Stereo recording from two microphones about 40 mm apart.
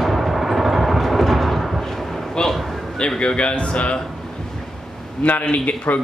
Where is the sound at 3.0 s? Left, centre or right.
Left.